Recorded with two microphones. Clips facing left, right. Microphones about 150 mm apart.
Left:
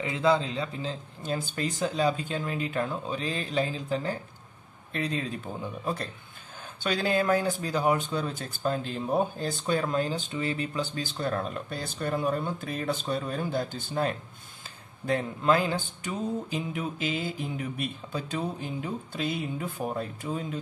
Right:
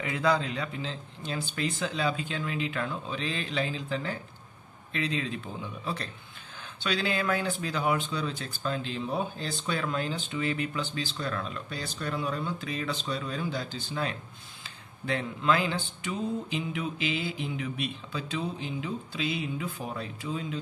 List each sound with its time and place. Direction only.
0.0 s speech: 25° left (ahead or behind); by 20.5 s 50° left (ahead or behind)